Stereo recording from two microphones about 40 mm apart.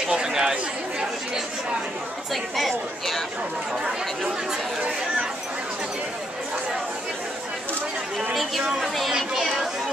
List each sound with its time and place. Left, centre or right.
0.0 s chatter: centre
2.5 s speech: centre
8.6 s speech: centre